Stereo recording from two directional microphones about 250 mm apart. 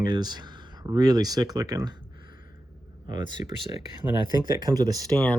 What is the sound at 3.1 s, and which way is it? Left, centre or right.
Speech, centre.